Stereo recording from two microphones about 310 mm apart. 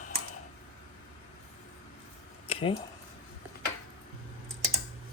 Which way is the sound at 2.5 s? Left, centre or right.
Centre.